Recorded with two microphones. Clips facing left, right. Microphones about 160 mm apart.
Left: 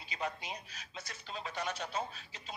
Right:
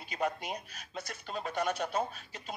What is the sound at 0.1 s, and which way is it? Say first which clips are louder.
Speech: right 6 dB; 50° right (ahead or behind).